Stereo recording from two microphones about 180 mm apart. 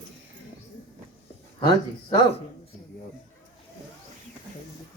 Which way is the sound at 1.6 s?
35° left (ahead or behind).